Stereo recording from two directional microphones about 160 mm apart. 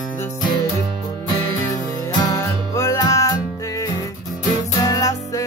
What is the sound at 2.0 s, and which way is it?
Music, 20° left (ahead or behind).